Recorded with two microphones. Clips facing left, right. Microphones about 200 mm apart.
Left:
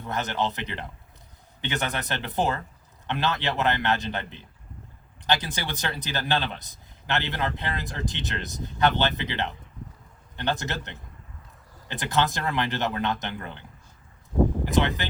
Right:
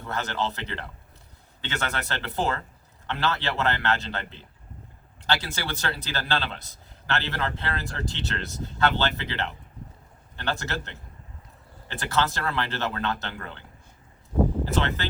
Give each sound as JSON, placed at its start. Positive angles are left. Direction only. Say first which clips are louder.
{"t": 0.0, "sound": "a man's voice", "louder": "left 1 dB", "side_deg": 20}